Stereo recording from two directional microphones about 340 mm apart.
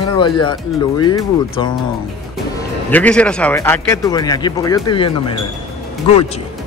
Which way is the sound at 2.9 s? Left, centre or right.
Centre.